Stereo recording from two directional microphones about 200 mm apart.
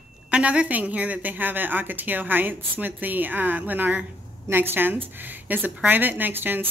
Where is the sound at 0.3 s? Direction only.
5° right (ahead or behind).